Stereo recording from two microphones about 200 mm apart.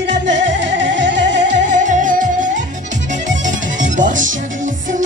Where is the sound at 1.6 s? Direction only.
40° right (ahead or behind).